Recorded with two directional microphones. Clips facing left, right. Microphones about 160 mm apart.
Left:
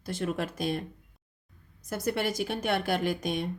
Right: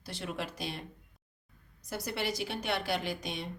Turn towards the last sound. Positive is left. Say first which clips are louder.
# left 7 dB
turn(degrees=50)  # may be behind; listen again after turning